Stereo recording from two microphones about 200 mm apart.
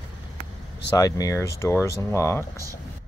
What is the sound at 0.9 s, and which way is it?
Speech, 20° left (ahead or behind).